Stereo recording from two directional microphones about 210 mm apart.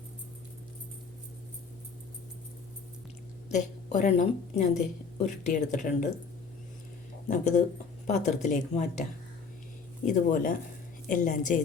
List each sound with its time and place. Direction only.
3.5 s speech: 35° left (ahead or behind)
7.3 s speech: 35° left (ahead or behind)
10.1 s speech: 40° left (ahead or behind)